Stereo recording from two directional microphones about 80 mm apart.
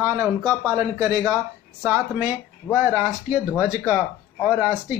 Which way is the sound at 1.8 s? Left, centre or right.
Right.